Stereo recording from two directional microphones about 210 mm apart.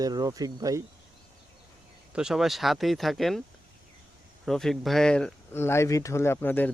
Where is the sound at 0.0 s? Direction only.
15° right (ahead or behind).